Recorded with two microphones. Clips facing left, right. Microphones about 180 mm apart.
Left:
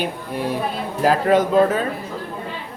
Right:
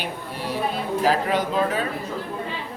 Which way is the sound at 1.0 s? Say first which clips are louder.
Left 7 dB; 50° left (ahead or behind).